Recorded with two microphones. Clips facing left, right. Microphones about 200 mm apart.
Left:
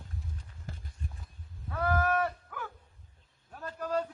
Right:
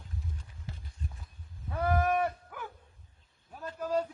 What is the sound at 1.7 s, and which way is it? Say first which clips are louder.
Livestock: right 1 dB; 20° right (ahead or behind).